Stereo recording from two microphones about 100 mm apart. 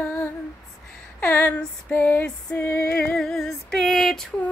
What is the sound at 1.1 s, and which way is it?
Female singing, 20° left (ahead or behind).